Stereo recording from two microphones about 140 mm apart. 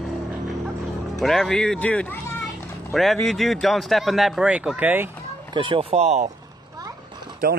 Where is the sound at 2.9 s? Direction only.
Centre (ahead or behind).